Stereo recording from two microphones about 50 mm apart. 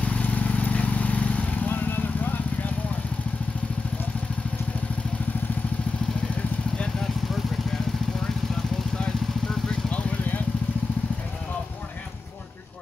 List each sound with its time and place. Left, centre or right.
0.0 s vehicle: left
9.7 s vehicle: left